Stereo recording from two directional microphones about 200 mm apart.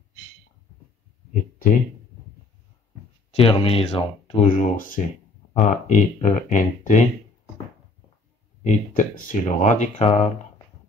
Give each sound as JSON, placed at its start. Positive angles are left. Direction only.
{"t": 1.3, "sound": "speech", "side_deg": 45}
{"t": 3.3, "sound": "speech", "side_deg": 25}
{"t": 8.6, "sound": "speech", "side_deg": 40}